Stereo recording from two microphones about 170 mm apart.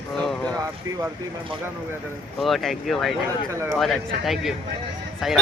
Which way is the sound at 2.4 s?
Centre (ahead or behind).